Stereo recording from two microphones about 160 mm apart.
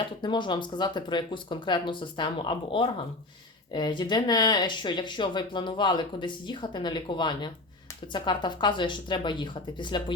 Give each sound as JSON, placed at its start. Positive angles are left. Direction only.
{"t": 0.2, "sound": "speech", "side_deg": 30}